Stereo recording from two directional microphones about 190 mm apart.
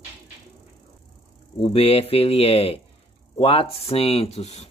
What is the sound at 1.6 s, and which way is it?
Speech, 30° left (ahead or behind).